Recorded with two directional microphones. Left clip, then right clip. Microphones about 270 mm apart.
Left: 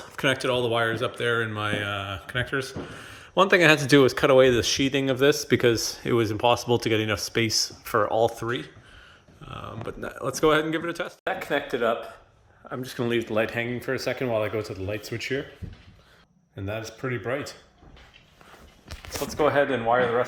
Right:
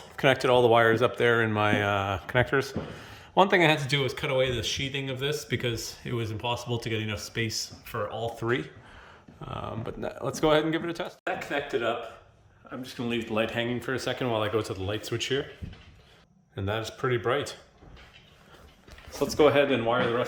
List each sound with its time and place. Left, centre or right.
0.2 s speech: centre
3.9 s speech: centre
8.4 s speech: centre
11.2 s speech: left; by 15.4 s centre
16.6 s speech: centre
19.4 s speech: centre